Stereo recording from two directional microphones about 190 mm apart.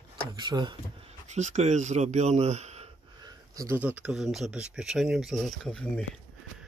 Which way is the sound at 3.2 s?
15° right (ahead or behind).